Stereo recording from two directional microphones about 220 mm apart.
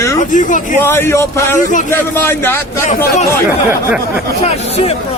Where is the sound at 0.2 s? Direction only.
35° left (ahead or behind).